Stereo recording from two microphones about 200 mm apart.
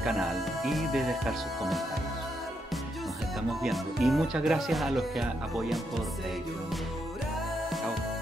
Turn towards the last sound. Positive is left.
turn(degrees=0)  # may be behind; listen again after turning